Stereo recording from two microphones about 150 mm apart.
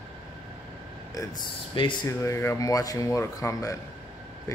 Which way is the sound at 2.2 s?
20° left (ahead or behind).